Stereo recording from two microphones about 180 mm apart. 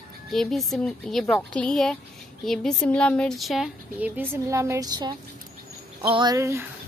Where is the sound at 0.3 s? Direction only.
Centre (ahead or behind); by 6.3 s 25° right (ahead or behind).